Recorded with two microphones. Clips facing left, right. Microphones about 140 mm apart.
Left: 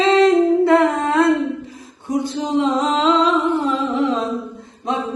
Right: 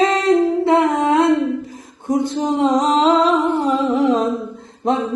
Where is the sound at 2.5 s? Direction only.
40° right (ahead or behind).